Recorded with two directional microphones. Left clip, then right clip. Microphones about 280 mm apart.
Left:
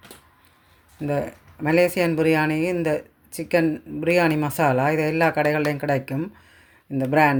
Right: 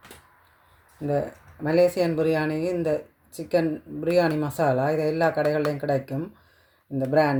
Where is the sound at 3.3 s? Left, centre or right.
Left.